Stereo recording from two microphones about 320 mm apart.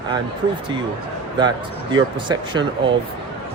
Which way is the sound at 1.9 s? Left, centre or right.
Centre.